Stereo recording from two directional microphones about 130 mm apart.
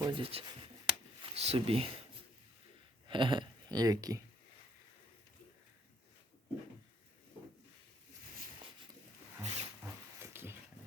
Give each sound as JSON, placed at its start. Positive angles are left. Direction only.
{"t": 0.0, "sound": "speech", "side_deg": -40}
{"t": 0.9, "sound": "a sound", "side_deg": -50}
{"t": 3.1, "sound": "speech", "side_deg": -40}
{"t": 9.4, "sound": "zipper", "side_deg": -60}
{"t": 10.2, "sound": "dog", "side_deg": -20}